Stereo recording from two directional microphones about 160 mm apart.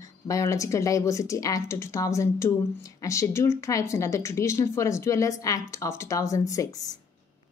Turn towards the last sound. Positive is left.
turn(degrees=20)  # may be behind; listen again after turning